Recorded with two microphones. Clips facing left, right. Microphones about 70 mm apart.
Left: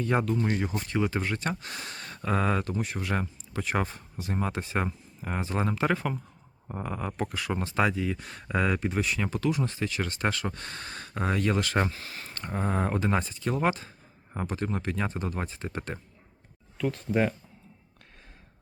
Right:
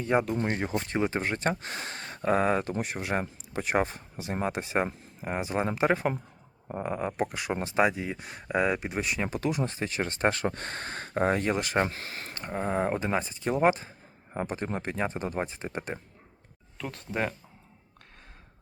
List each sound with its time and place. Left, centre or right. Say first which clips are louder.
0.0 s speech: even; centre
9.6 s speech: even; right
11.5 s speech: even; centre
11.9 s speech: right 1 dB; right
12.3 s speech: even; centre
16.7 s speech: left 6 dB; centre